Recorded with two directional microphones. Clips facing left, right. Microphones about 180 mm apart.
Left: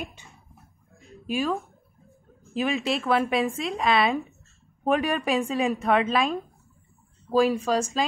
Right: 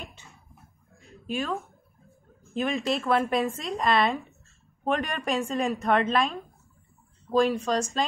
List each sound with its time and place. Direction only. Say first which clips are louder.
0.0 s a sound: left 6 dB; 15° left (ahead or behind)
1.2 s speech: left 4 dB; 10° left (ahead or behind)
2.5 s a woman's voice: left 1 dB; 5° left (ahead or behind)